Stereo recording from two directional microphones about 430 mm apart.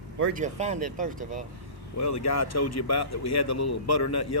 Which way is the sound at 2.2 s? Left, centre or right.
Left.